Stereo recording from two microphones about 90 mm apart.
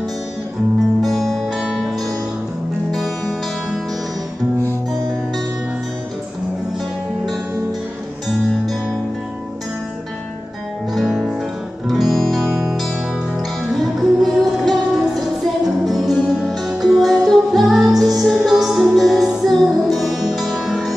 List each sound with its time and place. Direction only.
1.0 s music: centre (ahead or behind)
10.9 s music: 5° right (ahead or behind)
17.9 s music: 45° right (ahead or behind)
18.2 s music: centre (ahead or behind)